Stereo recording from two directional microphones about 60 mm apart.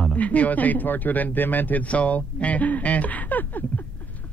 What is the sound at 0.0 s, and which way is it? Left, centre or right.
Speech, left.